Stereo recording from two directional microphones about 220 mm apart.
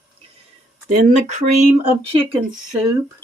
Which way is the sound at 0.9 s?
30° right (ahead or behind).